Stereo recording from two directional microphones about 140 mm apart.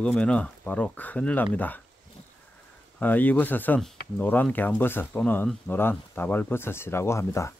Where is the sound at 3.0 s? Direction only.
10° left (ahead or behind).